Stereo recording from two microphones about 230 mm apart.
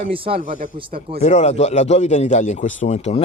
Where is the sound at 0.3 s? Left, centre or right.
Right.